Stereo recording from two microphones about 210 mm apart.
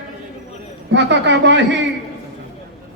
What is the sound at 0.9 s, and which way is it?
Speech, 60° right (ahead or behind).